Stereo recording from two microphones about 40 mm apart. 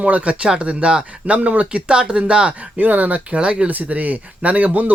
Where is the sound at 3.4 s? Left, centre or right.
Right.